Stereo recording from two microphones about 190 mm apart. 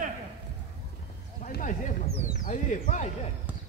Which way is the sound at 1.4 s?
45° left (ahead or behind).